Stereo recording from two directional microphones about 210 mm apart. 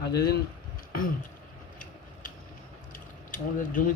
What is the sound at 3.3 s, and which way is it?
Speech, 40° left (ahead or behind).